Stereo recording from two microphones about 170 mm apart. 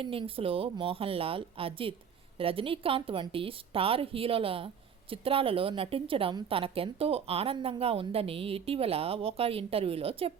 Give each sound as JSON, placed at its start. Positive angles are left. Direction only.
{"t": 0.0, "sound": "a woman's voice", "side_deg": -30}